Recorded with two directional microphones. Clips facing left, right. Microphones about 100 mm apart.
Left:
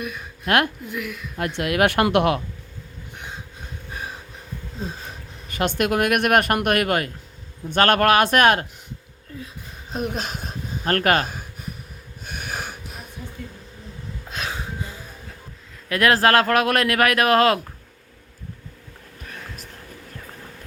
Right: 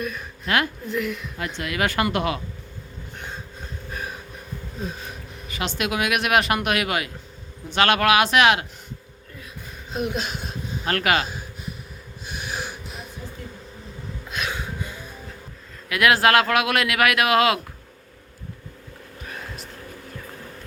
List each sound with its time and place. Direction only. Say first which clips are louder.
0.4 s speech: left 3 dB; 60° left (ahead or behind)
0.9 s a woman's voice: right 4 dB; 5° left (ahead or behind)
1.5 s speech: left 5 dB; 60° left (ahead or behind)
5.5 s speech: left 5 dB; 50° left (ahead or behind)
9.9 s speech: even; 40° left (ahead or behind)
12.2 s wheeze: even; 50° left (ahead or behind)
14.3 s a sound: right 1 dB; 35° left (ahead or behind)
15.9 s speech: left 1 dB; 35° left (ahead or behind)